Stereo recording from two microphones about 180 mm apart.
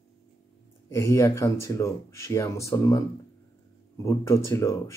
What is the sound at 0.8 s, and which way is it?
Speech, 15° left (ahead or behind).